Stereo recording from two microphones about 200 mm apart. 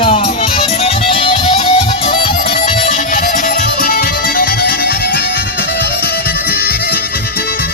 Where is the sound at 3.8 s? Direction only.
45° left (ahead or behind).